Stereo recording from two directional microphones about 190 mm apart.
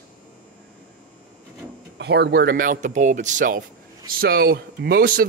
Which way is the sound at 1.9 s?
60° right (ahead or behind).